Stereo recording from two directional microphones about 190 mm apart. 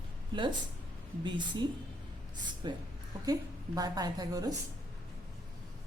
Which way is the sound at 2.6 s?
25° right (ahead or behind).